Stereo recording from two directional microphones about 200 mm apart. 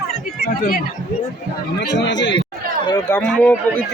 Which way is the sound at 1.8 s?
60° left (ahead or behind).